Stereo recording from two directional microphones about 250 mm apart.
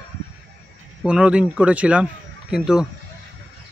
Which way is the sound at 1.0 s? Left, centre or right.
Centre.